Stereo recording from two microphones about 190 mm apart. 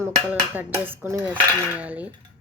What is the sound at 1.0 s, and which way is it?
Speech, 10° right (ahead or behind).